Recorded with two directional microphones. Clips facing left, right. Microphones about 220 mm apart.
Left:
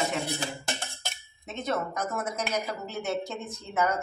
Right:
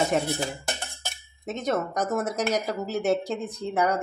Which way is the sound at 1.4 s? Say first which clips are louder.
Right 4 dB; 45° right (ahead or behind).